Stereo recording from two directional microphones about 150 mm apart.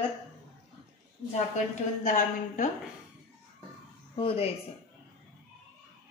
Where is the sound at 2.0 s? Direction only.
60° left (ahead or behind).